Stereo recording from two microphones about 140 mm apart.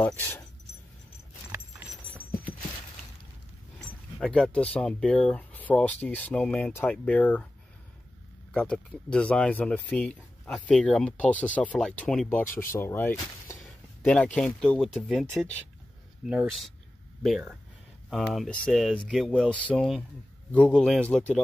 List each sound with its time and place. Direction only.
0.0 s speech: 10° left (ahead or behind)
1.5 s keys jangling: 15° right (ahead or behind)
4.2 s speech: 5° left (ahead or behind)
8.5 s speech: 10° left (ahead or behind)
13.7 s speech: 5° left (ahead or behind)
16.4 s speech: centre (ahead or behind)